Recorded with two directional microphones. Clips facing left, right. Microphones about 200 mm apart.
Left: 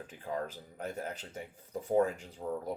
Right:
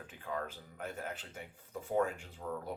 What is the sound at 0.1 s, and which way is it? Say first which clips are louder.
Speech: left 3 dB; 35° left (ahead or behind).